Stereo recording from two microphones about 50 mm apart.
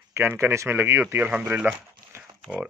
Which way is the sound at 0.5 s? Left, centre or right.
Right.